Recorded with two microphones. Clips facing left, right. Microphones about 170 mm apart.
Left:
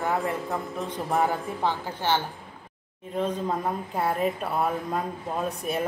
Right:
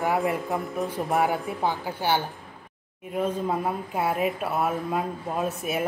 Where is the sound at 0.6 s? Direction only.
Centre (ahead or behind).